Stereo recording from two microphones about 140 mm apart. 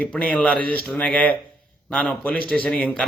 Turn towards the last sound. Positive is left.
turn(degrees=10)  # may be behind; listen again after turning